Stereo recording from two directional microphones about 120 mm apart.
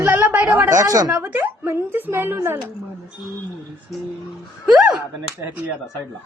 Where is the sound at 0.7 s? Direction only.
30° right (ahead or behind).